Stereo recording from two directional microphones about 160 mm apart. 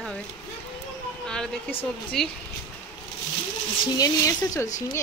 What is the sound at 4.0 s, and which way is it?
Speech, 20° left (ahead or behind).